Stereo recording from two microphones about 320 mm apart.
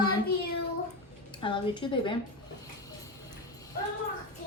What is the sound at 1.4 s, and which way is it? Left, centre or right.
Speech, centre.